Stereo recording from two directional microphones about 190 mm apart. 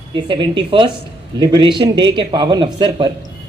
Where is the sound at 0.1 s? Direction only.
25° right (ahead or behind).